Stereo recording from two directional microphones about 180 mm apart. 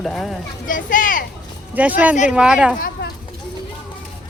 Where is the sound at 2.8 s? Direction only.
50° left (ahead or behind).